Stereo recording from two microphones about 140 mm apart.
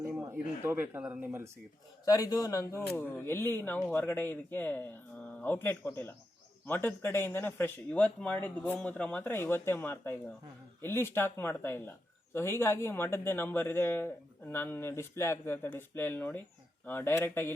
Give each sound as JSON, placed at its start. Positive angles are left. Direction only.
{"t": 0.0, "sound": "speech", "side_deg": -15}
{"t": 2.0, "sound": "speech", "side_deg": 25}